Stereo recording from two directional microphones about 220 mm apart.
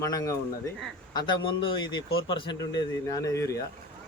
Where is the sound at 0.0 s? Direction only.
15° left (ahead or behind).